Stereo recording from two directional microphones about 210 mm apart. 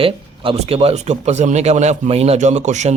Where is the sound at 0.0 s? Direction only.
25° right (ahead or behind).